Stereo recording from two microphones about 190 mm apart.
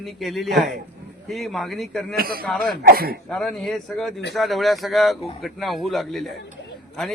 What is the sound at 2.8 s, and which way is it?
Speech, 50° right (ahead or behind).